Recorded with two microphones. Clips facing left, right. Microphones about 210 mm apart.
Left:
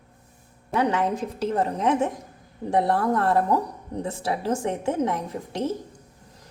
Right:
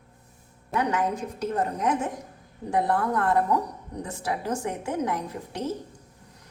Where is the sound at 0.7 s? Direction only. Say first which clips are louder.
Left 3 dB; 30° left (ahead or behind).